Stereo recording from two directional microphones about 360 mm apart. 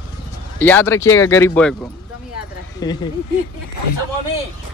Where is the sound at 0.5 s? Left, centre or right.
Centre.